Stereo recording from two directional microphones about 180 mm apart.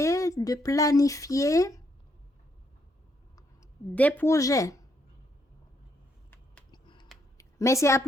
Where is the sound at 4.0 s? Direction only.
10° left (ahead or behind).